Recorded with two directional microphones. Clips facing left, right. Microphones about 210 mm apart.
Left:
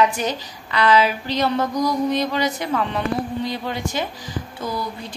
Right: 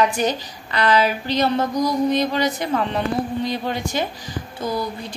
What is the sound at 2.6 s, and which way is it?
Speech, 35° right (ahead or behind).